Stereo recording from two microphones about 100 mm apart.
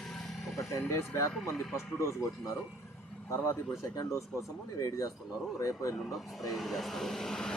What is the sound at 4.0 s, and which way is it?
Speech, 30° left (ahead or behind).